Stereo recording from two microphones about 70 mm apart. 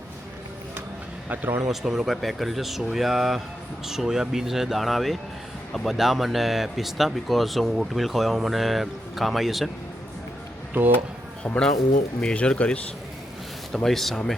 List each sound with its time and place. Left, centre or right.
1.3 s speech: right
1.7 s speech: centre
11.4 s speech: centre
13.7 s speech: centre